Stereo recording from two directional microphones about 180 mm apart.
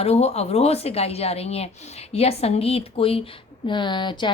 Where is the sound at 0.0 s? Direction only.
35° left (ahead or behind).